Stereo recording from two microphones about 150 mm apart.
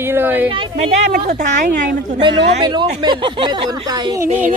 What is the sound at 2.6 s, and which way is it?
Speech, 30° right (ahead or behind).